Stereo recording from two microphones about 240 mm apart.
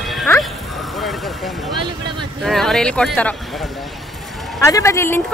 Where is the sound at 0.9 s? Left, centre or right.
Centre.